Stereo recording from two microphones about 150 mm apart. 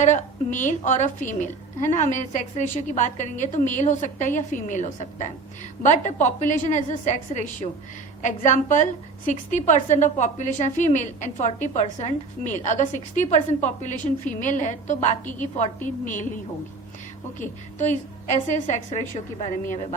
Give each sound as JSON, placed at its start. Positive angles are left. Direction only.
{"t": 0.0, "sound": "a woman's voice", "side_deg": 55}
{"t": 17.7, "sound": "a woman's voice", "side_deg": 55}